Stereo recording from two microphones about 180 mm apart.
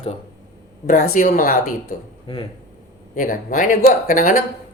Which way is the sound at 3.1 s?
45° left (ahead or behind).